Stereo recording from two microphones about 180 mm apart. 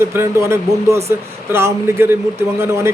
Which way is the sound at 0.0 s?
15° right (ahead or behind).